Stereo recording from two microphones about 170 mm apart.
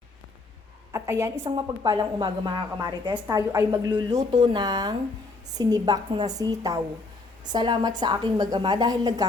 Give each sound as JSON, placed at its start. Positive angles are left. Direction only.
{"t": 0.9, "sound": "a woman's voice", "side_deg": -15}